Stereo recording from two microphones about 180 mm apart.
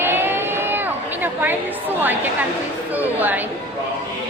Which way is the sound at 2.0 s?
10° right (ahead or behind).